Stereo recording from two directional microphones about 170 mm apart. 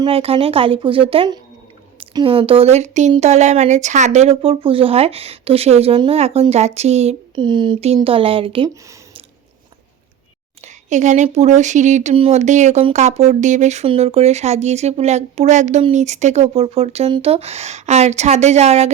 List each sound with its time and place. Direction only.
0.0 s speech: 35° right (ahead or behind)
10.6 s speech: 45° right (ahead or behind)